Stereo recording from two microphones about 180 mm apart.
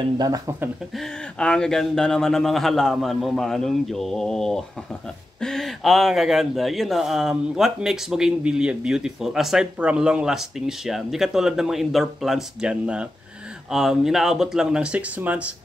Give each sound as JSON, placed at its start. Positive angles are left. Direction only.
{"t": 0.2, "sound": "speech", "side_deg": -20}
{"t": 0.9, "sound": "speech", "side_deg": 5}